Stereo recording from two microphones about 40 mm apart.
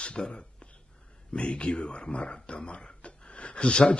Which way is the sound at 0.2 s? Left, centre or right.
Left.